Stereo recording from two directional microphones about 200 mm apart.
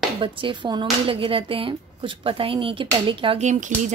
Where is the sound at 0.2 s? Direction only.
25° right (ahead or behind).